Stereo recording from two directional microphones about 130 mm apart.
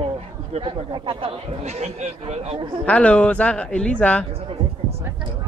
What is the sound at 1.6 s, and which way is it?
Speech, 55° right (ahead or behind).